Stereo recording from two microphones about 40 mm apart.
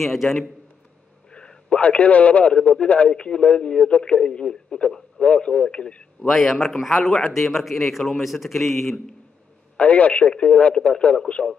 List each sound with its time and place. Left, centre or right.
0.0 s a man's voice: centre
1.3 s a man's voice: left
2.5 s a man's voice: left
6.2 s a man's voice: centre
9.8 s a man's voice: left